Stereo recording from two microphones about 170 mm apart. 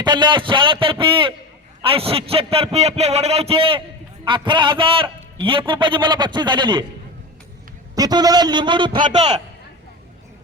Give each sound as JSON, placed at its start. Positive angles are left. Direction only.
{"t": 0.0, "sound": "a man's voice", "side_deg": -25}
{"t": 7.9, "sound": "a man's voice", "side_deg": -20}